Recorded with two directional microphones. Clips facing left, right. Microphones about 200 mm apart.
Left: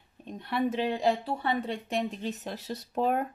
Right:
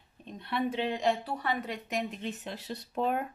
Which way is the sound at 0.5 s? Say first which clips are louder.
Left 3 dB; 40° left (ahead or behind).